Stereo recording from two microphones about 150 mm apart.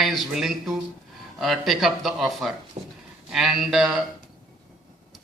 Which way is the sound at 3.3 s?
5° right (ahead or behind).